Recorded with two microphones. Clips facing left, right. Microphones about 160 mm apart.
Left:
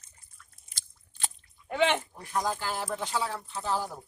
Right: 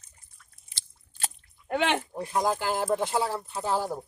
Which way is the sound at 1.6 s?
60° right (ahead or behind).